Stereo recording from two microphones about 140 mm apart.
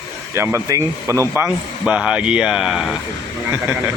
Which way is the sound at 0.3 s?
20° right (ahead or behind).